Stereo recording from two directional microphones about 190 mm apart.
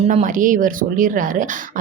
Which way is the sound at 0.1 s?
40° right (ahead or behind).